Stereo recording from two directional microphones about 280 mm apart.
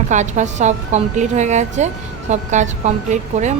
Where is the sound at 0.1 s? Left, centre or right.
Right.